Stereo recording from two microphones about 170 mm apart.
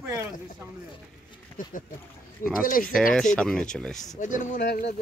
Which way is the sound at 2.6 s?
55° left (ahead or behind).